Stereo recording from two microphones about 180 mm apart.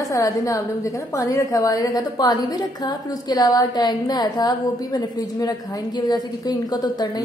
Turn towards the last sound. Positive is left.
turn(degrees=25)  # may be behind; listen again after turning